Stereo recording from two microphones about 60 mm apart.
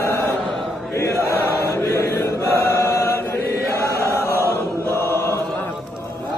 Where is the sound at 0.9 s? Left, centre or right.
Left.